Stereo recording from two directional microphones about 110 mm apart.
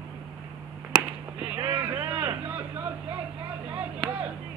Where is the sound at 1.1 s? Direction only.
10° right (ahead or behind).